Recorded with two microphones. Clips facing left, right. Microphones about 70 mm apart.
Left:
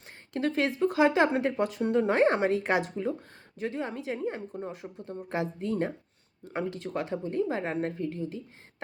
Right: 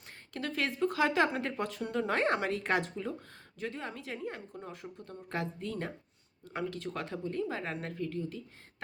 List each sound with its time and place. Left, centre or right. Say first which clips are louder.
0.3 s speech: left 6 dB; left